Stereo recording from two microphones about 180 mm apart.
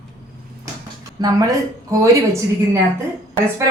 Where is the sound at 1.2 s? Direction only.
20° right (ahead or behind).